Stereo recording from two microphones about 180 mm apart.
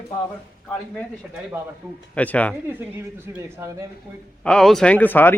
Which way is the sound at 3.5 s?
15° right (ahead or behind).